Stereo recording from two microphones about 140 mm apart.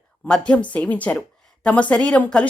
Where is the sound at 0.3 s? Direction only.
10° left (ahead or behind).